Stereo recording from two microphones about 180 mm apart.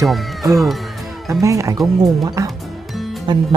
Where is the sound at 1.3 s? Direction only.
20° right (ahead or behind).